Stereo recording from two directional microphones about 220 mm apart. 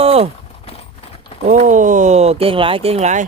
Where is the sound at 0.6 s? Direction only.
25° left (ahead or behind).